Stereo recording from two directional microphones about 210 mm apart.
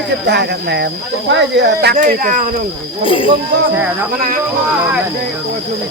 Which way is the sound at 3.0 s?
25° left (ahead or behind).